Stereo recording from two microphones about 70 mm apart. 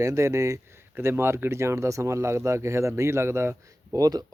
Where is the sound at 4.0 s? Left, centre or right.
Right.